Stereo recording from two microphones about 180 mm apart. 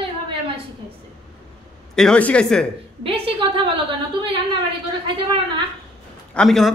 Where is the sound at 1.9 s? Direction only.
5° left (ahead or behind).